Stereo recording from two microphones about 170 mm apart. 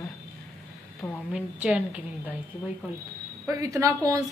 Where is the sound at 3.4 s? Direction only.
20° right (ahead or behind).